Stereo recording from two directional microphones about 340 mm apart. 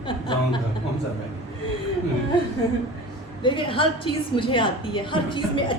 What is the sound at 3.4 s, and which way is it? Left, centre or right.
A woman's voice, centre.